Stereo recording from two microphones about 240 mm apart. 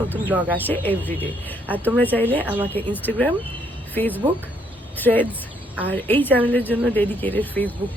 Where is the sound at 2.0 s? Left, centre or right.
Centre.